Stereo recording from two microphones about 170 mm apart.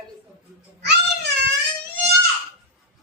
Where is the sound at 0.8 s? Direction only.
80° right.